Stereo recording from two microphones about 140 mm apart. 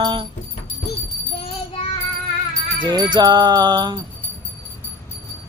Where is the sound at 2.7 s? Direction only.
30° right (ahead or behind).